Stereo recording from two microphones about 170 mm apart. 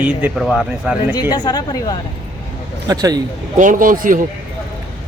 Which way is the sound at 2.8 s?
20° right (ahead or behind).